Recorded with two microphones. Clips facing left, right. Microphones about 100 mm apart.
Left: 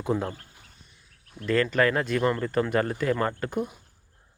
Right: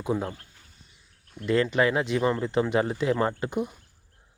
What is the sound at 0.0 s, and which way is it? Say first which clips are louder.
Speech: left 1 dB; 10° right (ahead or behind).